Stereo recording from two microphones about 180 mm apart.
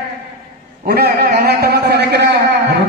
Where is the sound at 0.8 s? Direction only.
60° right (ahead or behind).